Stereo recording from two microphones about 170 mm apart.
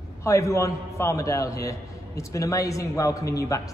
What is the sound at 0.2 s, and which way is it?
A man's voice, 15° left (ahead or behind).